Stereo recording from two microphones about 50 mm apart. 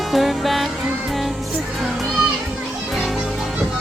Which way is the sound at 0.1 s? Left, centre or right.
Centre.